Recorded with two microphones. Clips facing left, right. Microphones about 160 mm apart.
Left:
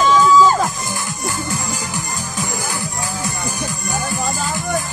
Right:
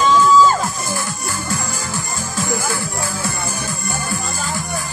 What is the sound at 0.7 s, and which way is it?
Music, 15° left (ahead or behind).